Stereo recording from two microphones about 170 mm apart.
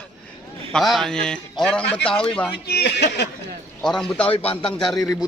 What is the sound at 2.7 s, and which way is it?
Speech, 75° left (ahead or behind).